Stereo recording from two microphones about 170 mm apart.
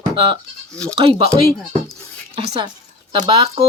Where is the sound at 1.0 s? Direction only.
35° right (ahead or behind).